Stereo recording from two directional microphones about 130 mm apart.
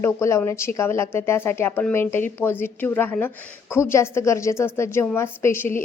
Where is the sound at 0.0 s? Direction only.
20° left (ahead or behind).